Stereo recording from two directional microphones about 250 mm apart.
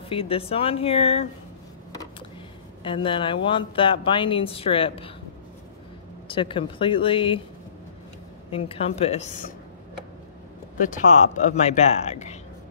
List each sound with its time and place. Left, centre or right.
0.1 s speech: left
2.8 s speech: centre
6.2 s speech: left
8.5 s speech: left
10.8 s speech: left